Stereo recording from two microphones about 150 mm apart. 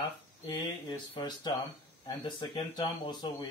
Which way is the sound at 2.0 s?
30° left (ahead or behind).